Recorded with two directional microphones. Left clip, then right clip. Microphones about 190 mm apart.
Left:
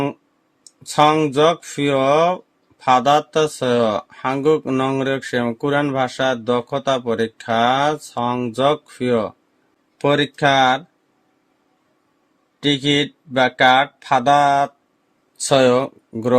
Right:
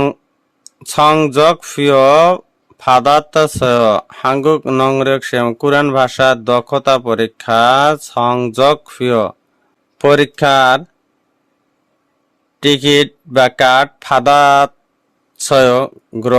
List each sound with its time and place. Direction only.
0.9 s speech: 40° right (ahead or behind)
12.5 s speech: 45° right (ahead or behind)
15.4 s speech: 35° right (ahead or behind)